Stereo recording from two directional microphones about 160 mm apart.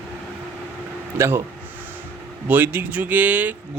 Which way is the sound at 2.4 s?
10° right (ahead or behind).